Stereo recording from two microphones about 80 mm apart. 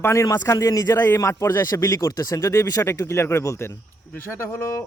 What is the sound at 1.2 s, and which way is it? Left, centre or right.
Speech, left.